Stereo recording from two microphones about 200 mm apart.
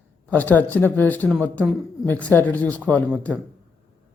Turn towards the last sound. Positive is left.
turn(degrees=5)  # may be behind; listen again after turning